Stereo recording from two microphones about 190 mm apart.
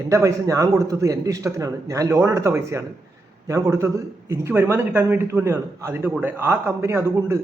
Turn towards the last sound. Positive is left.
turn(degrees=-15)  # may be behind; listen again after turning